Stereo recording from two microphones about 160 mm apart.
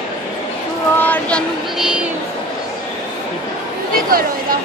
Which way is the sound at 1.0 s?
10° left (ahead or behind).